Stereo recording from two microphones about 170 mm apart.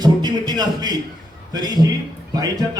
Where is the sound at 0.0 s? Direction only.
25° right (ahead or behind).